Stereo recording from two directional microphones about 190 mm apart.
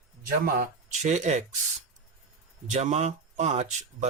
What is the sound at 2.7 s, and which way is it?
Speech, 35° right (ahead or behind).